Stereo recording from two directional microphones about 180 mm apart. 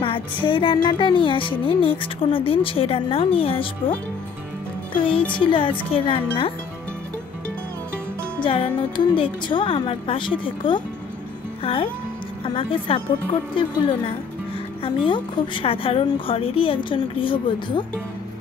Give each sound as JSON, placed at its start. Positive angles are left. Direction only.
{"t": 0.0, "sound": "speech", "side_deg": 30}
{"t": 5.4, "sound": "speech", "side_deg": 30}
{"t": 8.4, "sound": "speech", "side_deg": 30}